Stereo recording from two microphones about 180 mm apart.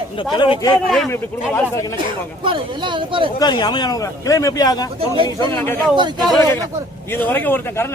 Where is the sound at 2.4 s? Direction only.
25° right (ahead or behind).